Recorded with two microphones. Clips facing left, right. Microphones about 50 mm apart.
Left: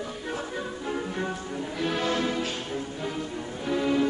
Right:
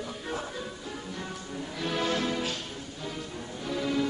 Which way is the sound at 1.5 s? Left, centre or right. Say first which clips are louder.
Left 1 dB; centre.